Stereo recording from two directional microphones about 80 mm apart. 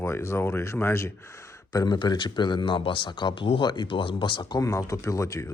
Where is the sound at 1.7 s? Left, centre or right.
Left.